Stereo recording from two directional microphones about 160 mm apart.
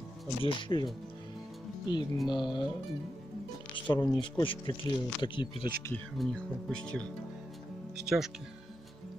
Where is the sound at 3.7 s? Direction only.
30° left (ahead or behind).